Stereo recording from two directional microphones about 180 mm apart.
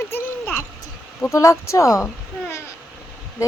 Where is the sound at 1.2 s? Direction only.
15° left (ahead or behind).